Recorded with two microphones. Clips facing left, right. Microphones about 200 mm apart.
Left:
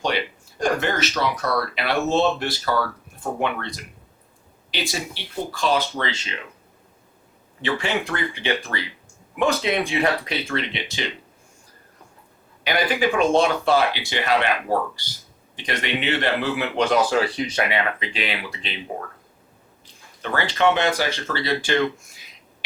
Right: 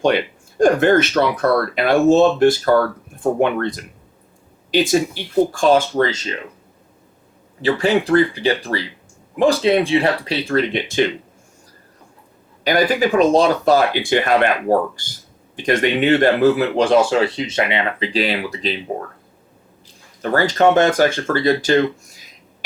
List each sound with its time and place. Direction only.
0.0 s speech: 50° right (ahead or behind)
7.6 s speech: 35° right (ahead or behind)
12.6 s speech: 40° right (ahead or behind); by 18.1 s 25° right (ahead or behind)
18.1 s speech: 35° right (ahead or behind)
20.2 s speech: 40° right (ahead or behind)